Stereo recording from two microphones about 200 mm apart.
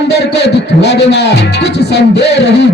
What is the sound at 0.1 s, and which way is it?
Speech, 55° left (ahead or behind).